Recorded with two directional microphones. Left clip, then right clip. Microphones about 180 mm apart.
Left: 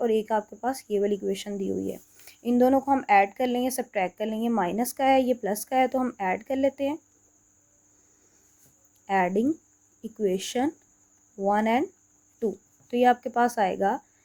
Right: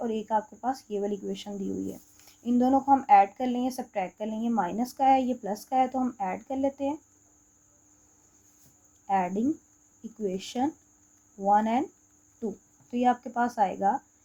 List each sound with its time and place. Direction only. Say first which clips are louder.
0.0 s speech: left 4 dB; 40° left (ahead or behind)
9.0 s speech: left 3 dB; 40° left (ahead or behind)